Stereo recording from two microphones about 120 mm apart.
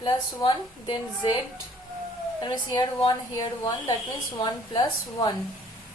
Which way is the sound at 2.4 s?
35° left (ahead or behind).